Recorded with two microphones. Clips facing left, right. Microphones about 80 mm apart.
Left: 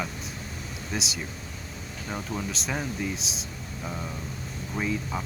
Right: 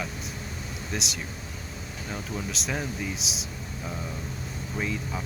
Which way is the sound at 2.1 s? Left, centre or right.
Centre.